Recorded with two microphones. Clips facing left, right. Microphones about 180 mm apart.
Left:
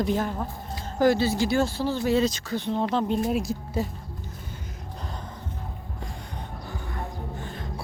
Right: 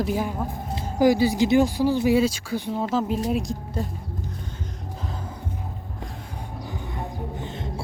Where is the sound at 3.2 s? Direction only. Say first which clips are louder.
Right 1 dB; centre (ahead or behind).